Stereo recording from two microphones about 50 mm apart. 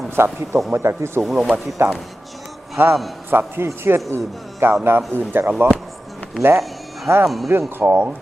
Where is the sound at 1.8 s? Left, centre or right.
Right.